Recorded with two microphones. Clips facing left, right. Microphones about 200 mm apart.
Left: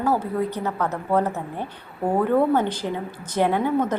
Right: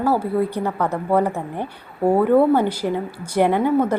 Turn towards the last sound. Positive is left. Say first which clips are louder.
# right 4 dB
turn(degrees=-10)  # may be behind; listen again after turning